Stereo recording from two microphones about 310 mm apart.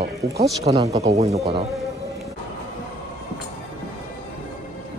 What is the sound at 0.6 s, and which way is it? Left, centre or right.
Speech, centre.